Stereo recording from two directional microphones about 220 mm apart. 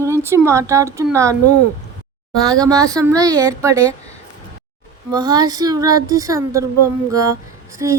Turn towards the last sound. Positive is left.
turn(degrees=-15)  # may be behind; listen again after turning